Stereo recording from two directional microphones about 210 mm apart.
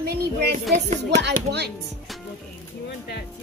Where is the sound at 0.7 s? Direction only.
35° right (ahead or behind).